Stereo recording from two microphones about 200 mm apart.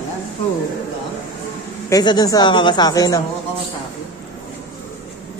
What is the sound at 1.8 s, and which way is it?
Speech, 20° left (ahead or behind).